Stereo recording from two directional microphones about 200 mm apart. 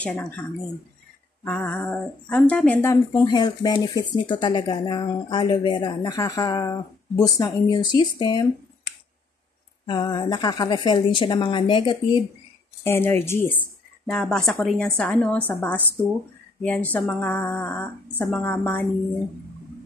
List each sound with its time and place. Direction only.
0.0 s a woman's voice: 5° left (ahead or behind); by 8.5 s 20° left (ahead or behind)
9.8 s speech: 20° left (ahead or behind)
12.8 s a woman's voice: 10° left (ahead or behind)